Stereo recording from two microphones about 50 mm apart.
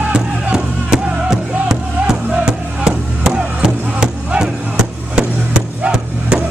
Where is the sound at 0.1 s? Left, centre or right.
Centre.